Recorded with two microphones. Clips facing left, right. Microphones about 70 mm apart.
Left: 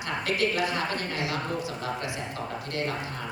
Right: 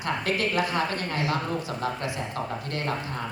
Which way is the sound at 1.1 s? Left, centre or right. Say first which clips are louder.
Right 3 dB; right.